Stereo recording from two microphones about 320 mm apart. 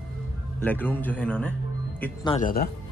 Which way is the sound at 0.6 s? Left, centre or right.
Centre.